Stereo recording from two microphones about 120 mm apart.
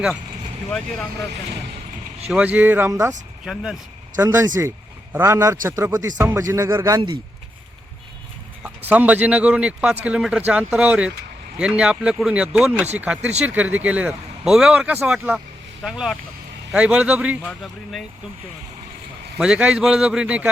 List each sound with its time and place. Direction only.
2.3 s speech: 15° right (ahead or behind)
2.9 s a man's voice: 30° right (ahead or behind)
3.4 s speech: 5° right (ahead or behind)
4.2 s a man's voice: 20° right (ahead or behind)
8.6 s speech: 15° right (ahead or behind)
19.4 s speech: 5° right (ahead or behind)